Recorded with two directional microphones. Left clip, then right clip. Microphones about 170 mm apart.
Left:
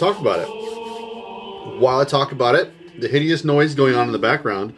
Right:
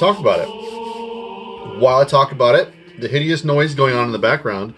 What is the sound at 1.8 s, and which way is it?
Speech, 10° left (ahead or behind).